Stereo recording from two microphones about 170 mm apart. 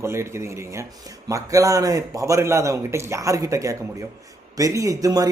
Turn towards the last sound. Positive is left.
turn(degrees=-20)  # may be behind; listen again after turning